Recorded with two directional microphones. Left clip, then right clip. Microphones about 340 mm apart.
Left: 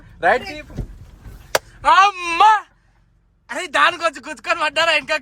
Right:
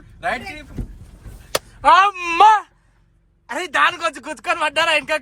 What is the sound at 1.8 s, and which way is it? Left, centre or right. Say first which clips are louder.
Speech: right 1 dB; centre.